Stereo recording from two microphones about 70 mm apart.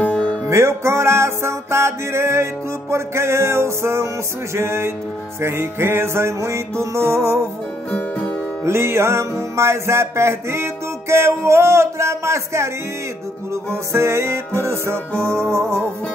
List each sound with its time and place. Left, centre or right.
0.0 s music: centre
0.5 s music: right
8.6 s music: right